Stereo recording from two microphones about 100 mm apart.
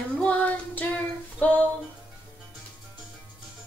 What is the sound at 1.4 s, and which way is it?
Music, 15° left (ahead or behind).